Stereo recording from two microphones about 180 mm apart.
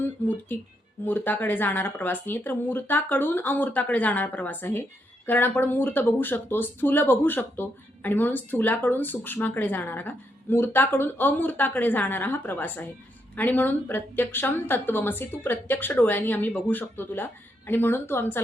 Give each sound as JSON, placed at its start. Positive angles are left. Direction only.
{"t": 0.0, "sound": "speech", "side_deg": 10}